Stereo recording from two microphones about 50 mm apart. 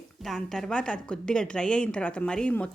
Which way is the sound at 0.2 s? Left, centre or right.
Centre.